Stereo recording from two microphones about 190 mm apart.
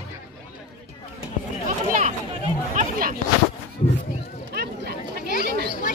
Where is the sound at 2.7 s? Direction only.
50° right (ahead or behind).